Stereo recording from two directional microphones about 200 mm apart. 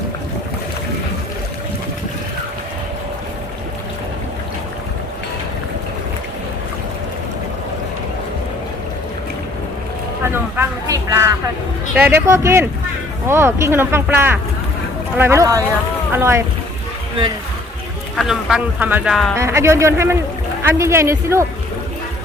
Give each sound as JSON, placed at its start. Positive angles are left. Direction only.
{"t": 10.3, "sound": "a sound", "side_deg": -15}
{"t": 11.9, "sound": "speech", "side_deg": -10}
{"t": 18.2, "sound": "speech", "side_deg": 0}
{"t": 19.4, "sound": "speech", "side_deg": -15}